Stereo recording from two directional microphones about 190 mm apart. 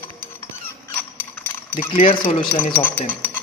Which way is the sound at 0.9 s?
10° left (ahead or behind).